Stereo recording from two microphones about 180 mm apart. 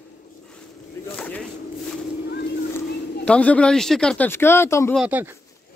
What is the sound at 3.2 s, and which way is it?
Speech, 5° left (ahead or behind).